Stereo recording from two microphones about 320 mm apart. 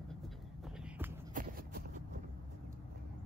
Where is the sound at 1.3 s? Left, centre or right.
Right.